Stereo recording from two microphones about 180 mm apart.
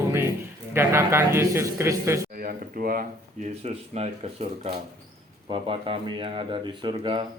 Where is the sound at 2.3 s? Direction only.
55° right (ahead or behind).